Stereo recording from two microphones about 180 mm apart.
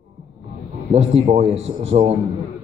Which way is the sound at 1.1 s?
40° right (ahead or behind).